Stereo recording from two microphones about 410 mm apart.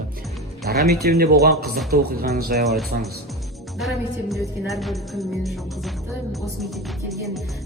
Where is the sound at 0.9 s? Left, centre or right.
Right.